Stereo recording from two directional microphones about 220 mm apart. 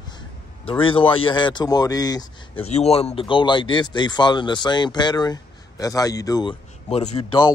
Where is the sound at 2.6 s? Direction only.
30° left (ahead or behind).